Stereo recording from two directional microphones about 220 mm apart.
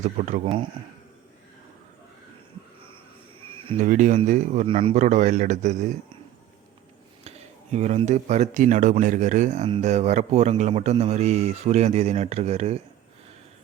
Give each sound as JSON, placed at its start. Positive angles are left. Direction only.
{"t": 0.0, "sound": "speech", "side_deg": -35}
{"t": 3.7, "sound": "speech", "side_deg": -35}
{"t": 7.3, "sound": "speech", "side_deg": -30}